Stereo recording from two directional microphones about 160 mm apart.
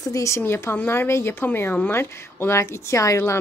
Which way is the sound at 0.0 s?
20° left (ahead or behind).